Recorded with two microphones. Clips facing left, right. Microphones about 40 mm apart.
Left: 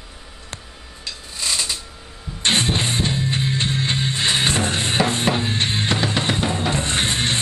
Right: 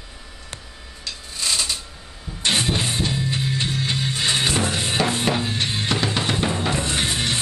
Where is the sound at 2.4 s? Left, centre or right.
Left.